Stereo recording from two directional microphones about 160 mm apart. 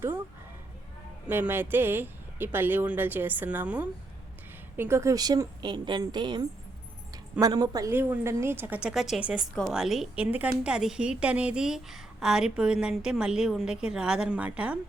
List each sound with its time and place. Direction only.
1.3 s a woman's voice: 10° right (ahead or behind)